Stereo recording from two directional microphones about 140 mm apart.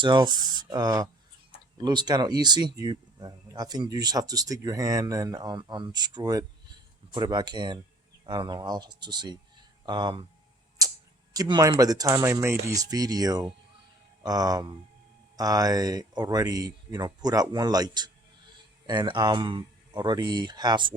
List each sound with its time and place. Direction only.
0.0 s speech: 35° right (ahead or behind)
10.8 s tick-tock: 25° right (ahead or behind)
11.3 s speech: 30° right (ahead or behind)